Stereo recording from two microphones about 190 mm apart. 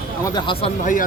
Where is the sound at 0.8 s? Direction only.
45° left (ahead or behind).